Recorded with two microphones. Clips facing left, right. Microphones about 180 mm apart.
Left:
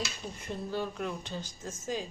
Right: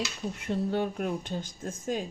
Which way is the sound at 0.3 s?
65° right (ahead or behind).